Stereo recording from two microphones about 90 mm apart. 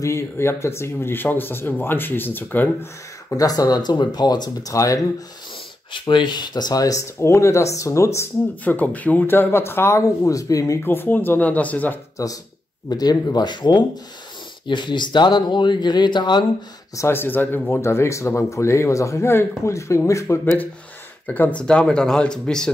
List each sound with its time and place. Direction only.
0.0 s speech: 30° left (ahead or behind)
3.3 s speech: 45° left (ahead or behind)
4.7 s speech: 40° left (ahead or behind)
5.9 s speech: 65° left (ahead or behind); by 8.3 s 35° left (ahead or behind)
8.6 s speech: 20° left (ahead or behind); by 10.8 s 40° left (ahead or behind)
10.8 s speech: 25° left (ahead or behind)
12.2 s speech: 40° left (ahead or behind); by 16.4 s 55° left (ahead or behind)
16.9 s speech: 30° left (ahead or behind)
21.3 s speech: 15° left (ahead or behind)